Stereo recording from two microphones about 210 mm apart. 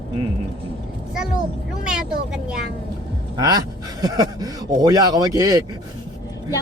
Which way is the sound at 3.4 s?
20° right (ahead or behind).